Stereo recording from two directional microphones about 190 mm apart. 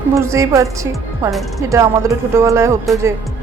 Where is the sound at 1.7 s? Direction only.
15° right (ahead or behind).